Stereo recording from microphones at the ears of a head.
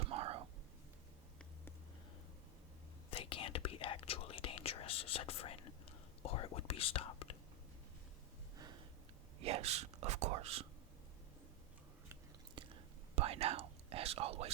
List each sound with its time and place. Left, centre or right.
0.0 s whispering: right
3.1 s whispering: left
9.4 s whispering: right
12.5 s whispering: right